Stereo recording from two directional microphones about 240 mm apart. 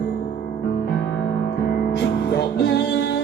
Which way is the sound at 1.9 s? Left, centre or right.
Left.